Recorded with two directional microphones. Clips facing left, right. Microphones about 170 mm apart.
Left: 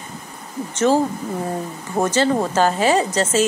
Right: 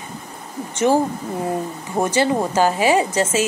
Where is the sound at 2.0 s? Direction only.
15° right (ahead or behind).